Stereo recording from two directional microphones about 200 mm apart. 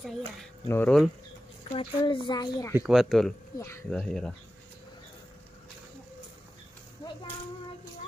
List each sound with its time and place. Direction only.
0.7 s speech: 10° left (ahead or behind)
1.7 s a woman's voice: 25° left (ahead or behind)
2.7 s speech: 5° right (ahead or behind)
3.5 s speech: 15° left (ahead or behind)
3.9 s speech: 5° left (ahead or behind)